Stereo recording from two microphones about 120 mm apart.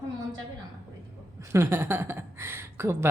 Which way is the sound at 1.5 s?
20° right (ahead or behind).